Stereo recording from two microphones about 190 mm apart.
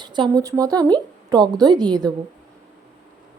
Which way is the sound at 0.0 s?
25° right (ahead or behind).